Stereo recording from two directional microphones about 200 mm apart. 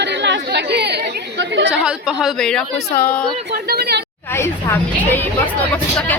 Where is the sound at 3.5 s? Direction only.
50° right (ahead or behind).